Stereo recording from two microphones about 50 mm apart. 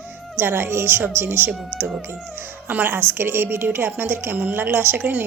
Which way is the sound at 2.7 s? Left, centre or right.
Right.